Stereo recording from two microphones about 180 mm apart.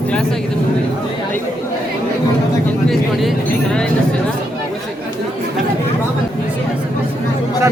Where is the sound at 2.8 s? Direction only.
Centre (ahead or behind).